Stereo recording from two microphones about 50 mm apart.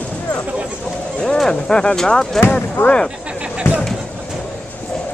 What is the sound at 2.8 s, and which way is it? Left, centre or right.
Speech, left.